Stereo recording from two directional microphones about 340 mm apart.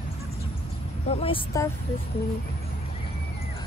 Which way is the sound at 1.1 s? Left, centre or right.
Centre.